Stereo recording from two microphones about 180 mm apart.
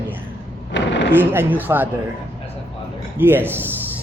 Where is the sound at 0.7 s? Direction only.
80° left.